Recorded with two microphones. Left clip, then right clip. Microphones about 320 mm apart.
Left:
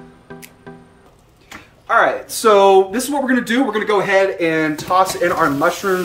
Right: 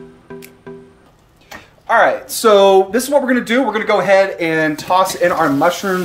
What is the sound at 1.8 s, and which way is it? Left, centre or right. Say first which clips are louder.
Speech: right 2 dB; right.